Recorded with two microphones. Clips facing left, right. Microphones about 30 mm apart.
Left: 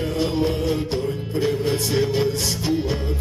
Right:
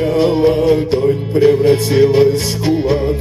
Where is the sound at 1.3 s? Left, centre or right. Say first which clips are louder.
Right 12 dB; right.